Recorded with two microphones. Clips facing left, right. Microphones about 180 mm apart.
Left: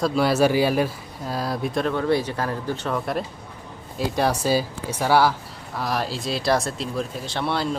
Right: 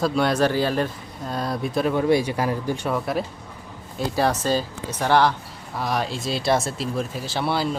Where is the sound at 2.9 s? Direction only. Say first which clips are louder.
Right 1 dB; centre (ahead or behind).